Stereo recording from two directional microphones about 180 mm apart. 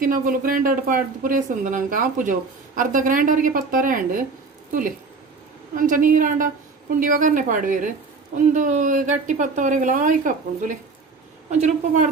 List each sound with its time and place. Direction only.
0.0 s speech: 50° right (ahead or behind)
5.8 s speech: 50° right (ahead or behind)